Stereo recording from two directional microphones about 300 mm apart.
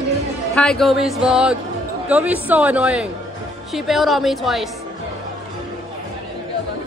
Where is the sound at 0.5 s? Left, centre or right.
Centre.